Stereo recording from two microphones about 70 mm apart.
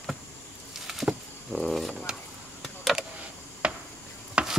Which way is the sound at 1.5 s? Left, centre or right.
Centre.